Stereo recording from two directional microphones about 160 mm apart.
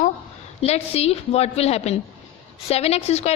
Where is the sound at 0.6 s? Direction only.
40° left (ahead or behind).